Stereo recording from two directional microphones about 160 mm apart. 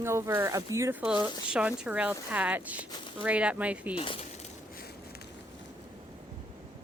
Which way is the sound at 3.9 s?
35° left (ahead or behind).